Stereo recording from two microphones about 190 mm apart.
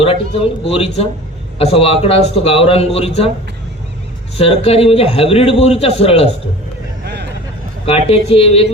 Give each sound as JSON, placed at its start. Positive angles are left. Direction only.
{"t": 0.0, "sound": "a man's voice", "side_deg": 30}
{"t": 4.4, "sound": "a man's voice", "side_deg": 30}
{"t": 7.0, "sound": "vehicle", "side_deg": -60}
{"t": 7.9, "sound": "a man's voice", "side_deg": 30}